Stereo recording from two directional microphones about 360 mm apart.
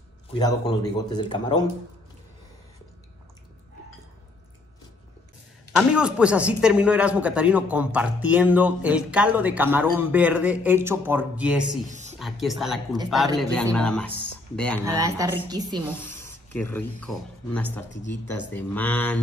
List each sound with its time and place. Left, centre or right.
0.3 s speech: centre
5.8 s speech: centre
11.8 s a sound: centre
12.2 s speech: centre
14.8 s a woman's voice: centre
16.0 s speech: centre
17.9 s speech: left
18.5 s speech: centre